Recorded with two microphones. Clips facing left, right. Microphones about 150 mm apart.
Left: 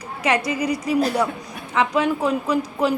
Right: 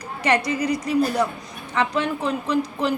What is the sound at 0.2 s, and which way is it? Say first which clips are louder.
A woman's voice: even; 5° left (ahead or behind).